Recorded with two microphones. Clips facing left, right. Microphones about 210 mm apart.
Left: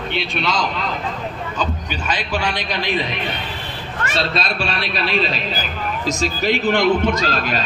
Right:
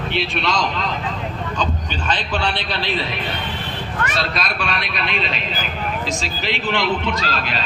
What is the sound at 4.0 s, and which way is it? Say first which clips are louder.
A man's voice: left 2 dB; 30° left (ahead or behind).